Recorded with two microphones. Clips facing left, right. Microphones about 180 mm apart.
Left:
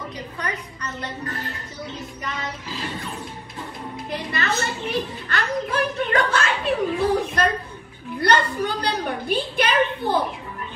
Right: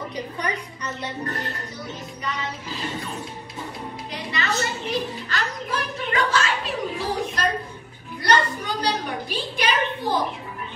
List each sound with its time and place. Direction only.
0.1 s a woman's voice: 15° right (ahead or behind)
4.1 s music: 55° left (ahead or behind)
8.2 s a sound: 60° left (ahead or behind)